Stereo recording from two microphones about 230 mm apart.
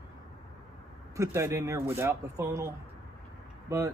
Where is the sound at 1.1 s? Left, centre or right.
Centre.